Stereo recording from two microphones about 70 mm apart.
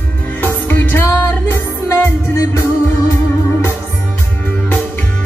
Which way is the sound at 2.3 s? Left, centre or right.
Left.